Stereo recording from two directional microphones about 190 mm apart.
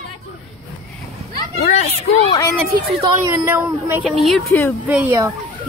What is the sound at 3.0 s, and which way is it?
Speech, 15° right (ahead or behind).